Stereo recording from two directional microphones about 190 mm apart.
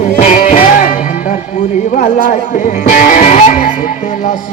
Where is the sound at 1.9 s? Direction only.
45° left (ahead or behind).